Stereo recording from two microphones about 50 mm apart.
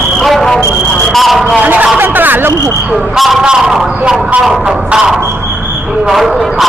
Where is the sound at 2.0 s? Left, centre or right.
Right.